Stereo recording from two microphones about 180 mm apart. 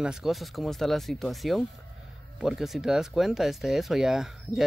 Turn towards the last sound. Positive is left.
turn(degrees=0)  # may be behind; listen again after turning